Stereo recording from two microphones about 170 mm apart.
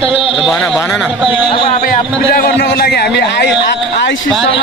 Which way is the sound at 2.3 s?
65° left (ahead or behind).